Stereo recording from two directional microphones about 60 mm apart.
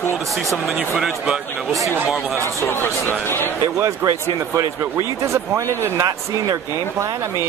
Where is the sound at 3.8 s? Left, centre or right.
Right.